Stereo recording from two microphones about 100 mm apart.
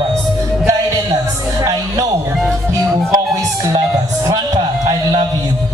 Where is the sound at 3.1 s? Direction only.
40° right (ahead or behind).